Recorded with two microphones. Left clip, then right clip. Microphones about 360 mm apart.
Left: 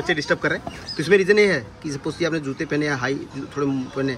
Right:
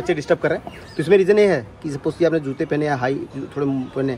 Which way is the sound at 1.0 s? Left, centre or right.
Centre.